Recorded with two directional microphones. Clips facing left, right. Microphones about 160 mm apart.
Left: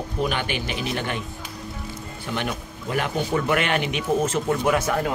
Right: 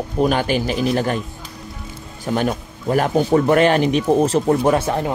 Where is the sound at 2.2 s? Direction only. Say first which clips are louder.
Right 8 dB; 40° right (ahead or behind).